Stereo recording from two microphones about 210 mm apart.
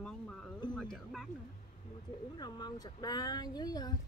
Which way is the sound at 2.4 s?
20° left (ahead or behind).